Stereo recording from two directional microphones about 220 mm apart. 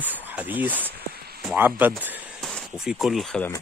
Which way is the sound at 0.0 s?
10° right (ahead or behind).